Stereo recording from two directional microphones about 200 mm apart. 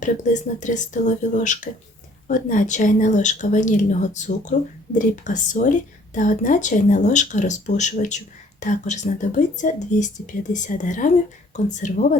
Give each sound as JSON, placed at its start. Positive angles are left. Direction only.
{"t": 0.0, "sound": "a woman's voice", "side_deg": 40}